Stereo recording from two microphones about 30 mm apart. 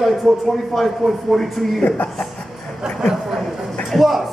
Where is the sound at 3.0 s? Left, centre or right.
Centre.